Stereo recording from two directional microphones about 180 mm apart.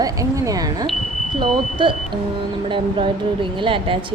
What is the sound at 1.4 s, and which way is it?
A woman's voice, 25° right (ahead or behind).